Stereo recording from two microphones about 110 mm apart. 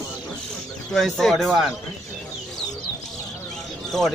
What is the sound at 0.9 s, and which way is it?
Speech, 5° left (ahead or behind).